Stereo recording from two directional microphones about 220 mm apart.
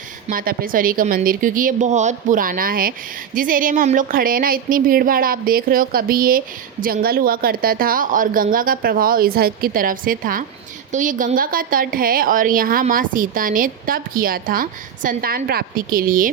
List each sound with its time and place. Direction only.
0.3 s a woman's voice: 40° right (ahead or behind)